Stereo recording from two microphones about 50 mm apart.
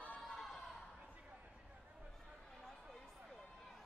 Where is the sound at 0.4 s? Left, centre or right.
Centre.